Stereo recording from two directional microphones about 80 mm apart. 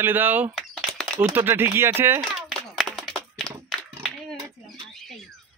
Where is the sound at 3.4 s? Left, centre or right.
Centre.